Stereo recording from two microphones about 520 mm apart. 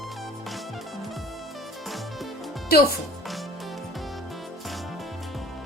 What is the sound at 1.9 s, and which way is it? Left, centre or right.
Music, centre.